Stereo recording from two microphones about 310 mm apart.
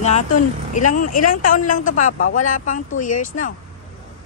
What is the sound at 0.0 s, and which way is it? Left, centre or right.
A woman's voice, left.